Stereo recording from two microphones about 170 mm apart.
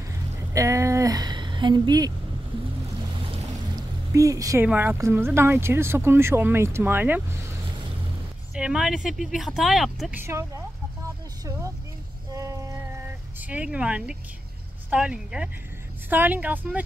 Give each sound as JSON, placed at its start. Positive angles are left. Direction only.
{"t": 0.5, "sound": "a sound", "side_deg": -15}
{"t": 3.4, "sound": "a sound", "side_deg": -20}
{"t": 4.6, "sound": "speech", "side_deg": -10}
{"t": 8.5, "sound": "speech", "side_deg": -5}
{"t": 10.1, "sound": "speech", "side_deg": -15}
{"t": 12.4, "sound": "music", "side_deg": -20}
{"t": 13.4, "sound": "speech", "side_deg": -10}